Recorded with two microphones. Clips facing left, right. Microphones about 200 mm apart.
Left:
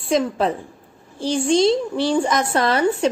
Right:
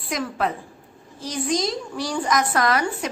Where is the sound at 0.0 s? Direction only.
25° left (ahead or behind).